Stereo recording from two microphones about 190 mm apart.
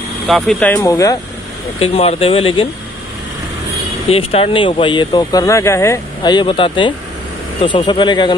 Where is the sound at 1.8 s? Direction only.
30° left (ahead or behind).